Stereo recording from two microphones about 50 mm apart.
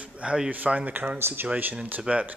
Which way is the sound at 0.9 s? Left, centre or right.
Right.